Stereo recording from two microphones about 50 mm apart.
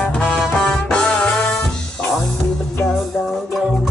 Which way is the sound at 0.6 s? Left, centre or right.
Centre.